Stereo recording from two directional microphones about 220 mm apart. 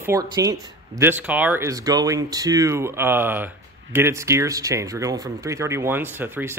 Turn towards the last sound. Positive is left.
turn(degrees=-10)  # may be behind; listen again after turning